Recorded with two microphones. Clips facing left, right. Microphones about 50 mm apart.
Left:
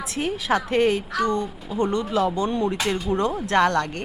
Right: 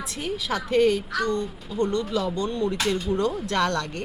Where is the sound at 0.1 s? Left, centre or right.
Left.